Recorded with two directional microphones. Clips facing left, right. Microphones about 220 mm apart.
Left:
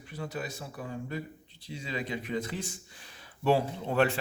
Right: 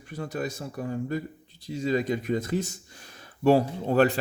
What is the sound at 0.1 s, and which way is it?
Speech, 45° right (ahead or behind).